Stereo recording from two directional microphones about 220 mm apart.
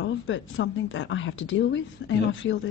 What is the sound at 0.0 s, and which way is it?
A woman's voice, 60° left (ahead or behind).